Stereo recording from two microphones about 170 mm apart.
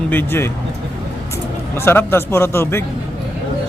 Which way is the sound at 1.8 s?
15° left (ahead or behind).